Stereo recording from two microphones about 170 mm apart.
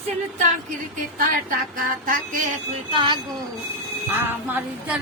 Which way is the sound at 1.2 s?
55° right (ahead or behind).